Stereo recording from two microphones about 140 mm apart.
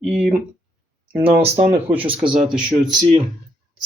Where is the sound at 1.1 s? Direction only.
15° right (ahead or behind).